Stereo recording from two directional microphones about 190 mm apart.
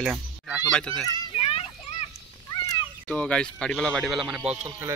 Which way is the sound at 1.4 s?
30° left (ahead or behind).